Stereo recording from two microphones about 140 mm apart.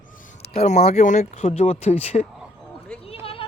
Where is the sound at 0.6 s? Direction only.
55° left (ahead or behind).